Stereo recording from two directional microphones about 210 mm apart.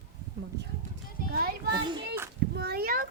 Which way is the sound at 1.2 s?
45° left (ahead or behind).